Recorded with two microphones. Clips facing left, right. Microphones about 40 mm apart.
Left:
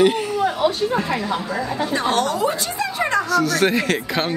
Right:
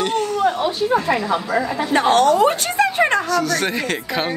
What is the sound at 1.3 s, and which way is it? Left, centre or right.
A woman's voice, right.